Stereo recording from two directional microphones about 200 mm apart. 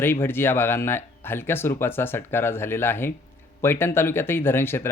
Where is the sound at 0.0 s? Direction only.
10° left (ahead or behind).